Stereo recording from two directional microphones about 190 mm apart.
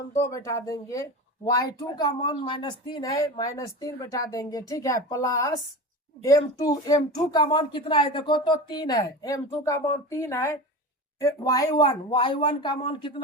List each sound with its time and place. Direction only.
0.1 s speech: 15° left (ahead or behind)